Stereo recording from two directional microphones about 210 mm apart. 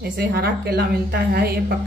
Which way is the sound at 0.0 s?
45° right (ahead or behind).